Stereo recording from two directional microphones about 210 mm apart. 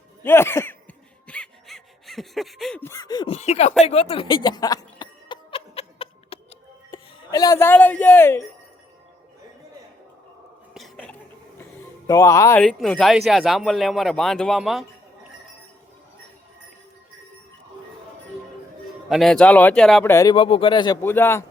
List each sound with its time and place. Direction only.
0.2 s a sound: 10° left (ahead or behind); by 6.4 s 25° left (ahead or behind)
6.9 s speech: 15° left (ahead or behind)
10.8 s a sound: centre (ahead or behind)
12.0 s speech: 15° left (ahead or behind)
12.6 s speech: centre (ahead or behind)
19.0 s speech: centre (ahead or behind)
20.3 s speech: 25° left (ahead or behind)